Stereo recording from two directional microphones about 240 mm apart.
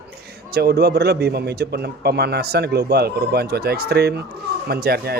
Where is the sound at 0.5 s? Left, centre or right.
Right.